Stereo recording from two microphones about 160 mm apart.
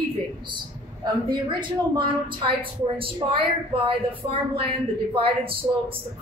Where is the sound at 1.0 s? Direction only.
30° right (ahead or behind).